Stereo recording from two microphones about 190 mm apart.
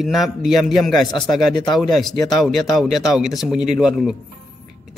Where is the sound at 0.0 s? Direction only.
Centre (ahead or behind).